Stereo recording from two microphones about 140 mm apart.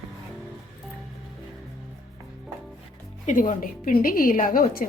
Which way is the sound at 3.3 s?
70° left (ahead or behind).